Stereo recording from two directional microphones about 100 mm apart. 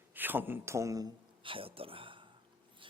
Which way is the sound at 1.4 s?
65° right (ahead or behind).